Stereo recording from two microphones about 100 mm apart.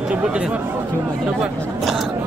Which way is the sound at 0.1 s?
10° right (ahead or behind).